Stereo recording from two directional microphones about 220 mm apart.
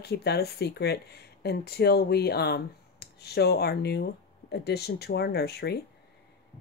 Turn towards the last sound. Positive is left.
turn(degrees=45)  # may be behind; listen again after turning